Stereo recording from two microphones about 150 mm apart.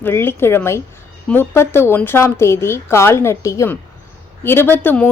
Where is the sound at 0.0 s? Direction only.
15° left (ahead or behind).